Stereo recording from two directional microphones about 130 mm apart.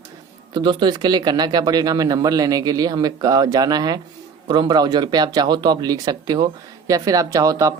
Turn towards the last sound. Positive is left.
turn(degrees=-25)  # may be behind; listen again after turning